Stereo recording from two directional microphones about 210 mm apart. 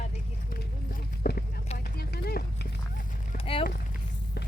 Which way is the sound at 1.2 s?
45° left (ahead or behind).